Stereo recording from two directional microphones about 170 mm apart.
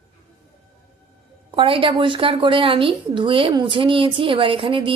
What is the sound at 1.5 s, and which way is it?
A woman's voice, 30° right (ahead or behind).